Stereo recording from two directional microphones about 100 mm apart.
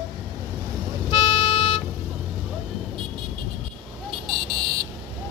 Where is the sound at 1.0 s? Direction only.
50° left (ahead or behind).